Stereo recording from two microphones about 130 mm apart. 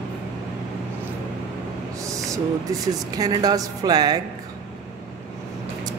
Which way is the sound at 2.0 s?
25° right (ahead or behind).